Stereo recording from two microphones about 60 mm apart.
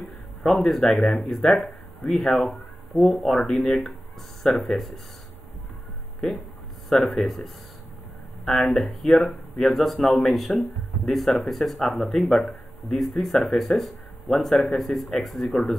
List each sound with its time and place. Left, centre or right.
0.6 s speech: centre
0.9 s speech: centre
1.2 s speech: centre
7.2 s speech: centre
9.9 s speech: centre